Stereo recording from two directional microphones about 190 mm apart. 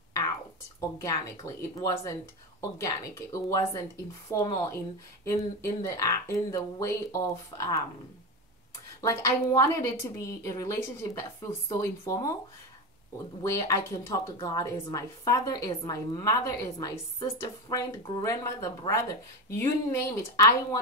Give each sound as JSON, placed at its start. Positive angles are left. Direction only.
{"t": 0.7, "sound": "a woman's voice", "side_deg": 15}
{"t": 9.0, "sound": "a woman's voice", "side_deg": 15}
{"t": 13.4, "sound": "a woman's voice", "side_deg": 15}